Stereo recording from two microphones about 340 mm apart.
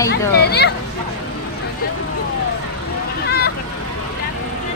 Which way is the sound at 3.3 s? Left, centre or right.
Left.